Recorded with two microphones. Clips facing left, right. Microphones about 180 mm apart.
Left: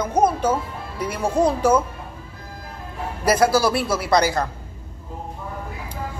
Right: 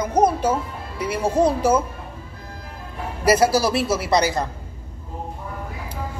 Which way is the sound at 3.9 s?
55° left (ahead or behind).